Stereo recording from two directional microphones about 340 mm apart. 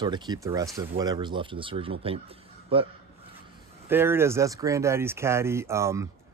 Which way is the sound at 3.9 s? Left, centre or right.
Centre.